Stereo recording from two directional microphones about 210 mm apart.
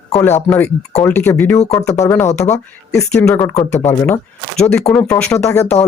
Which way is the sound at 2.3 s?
35° left (ahead or behind).